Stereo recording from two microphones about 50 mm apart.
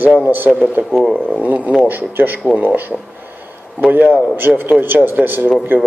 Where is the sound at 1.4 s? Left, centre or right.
Right.